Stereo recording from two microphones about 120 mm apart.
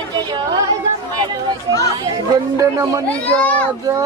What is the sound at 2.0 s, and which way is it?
Speech, 30° right (ahead or behind).